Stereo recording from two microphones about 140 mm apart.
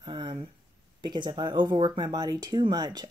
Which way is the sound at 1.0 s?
35° right (ahead or behind).